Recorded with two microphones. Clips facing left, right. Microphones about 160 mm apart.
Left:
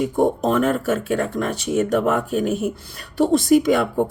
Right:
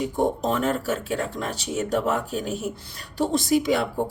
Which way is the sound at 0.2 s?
55° left (ahead or behind).